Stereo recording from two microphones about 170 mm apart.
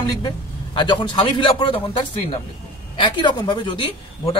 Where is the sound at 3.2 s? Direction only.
25° left (ahead or behind).